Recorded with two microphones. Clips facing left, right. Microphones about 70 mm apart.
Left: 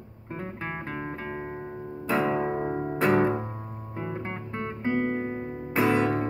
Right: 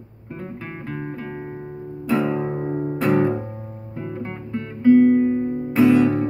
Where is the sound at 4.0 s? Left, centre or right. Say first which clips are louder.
Right 3 dB; left.